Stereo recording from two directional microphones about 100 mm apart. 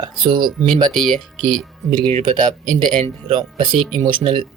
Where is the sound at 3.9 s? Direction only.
50° right (ahead or behind).